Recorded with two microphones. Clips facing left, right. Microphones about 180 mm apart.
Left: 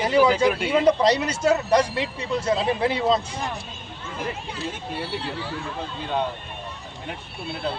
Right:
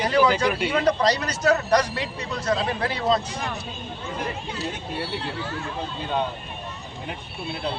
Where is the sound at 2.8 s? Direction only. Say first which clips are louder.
Left 2 dB; 20° left (ahead or behind).